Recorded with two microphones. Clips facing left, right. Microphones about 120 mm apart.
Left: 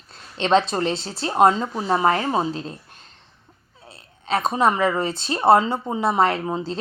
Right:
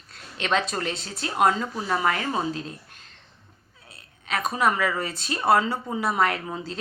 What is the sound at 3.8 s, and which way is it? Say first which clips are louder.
Speech: left 7 dB; 30° left (ahead or behind).